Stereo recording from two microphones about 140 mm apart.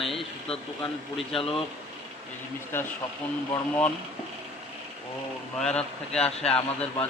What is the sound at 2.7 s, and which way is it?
Speech, 15° left (ahead or behind).